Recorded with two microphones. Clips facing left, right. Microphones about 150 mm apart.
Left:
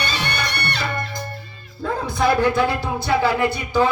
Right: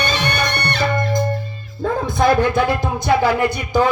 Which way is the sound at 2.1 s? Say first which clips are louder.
Right 2 dB; 20° right (ahead or behind).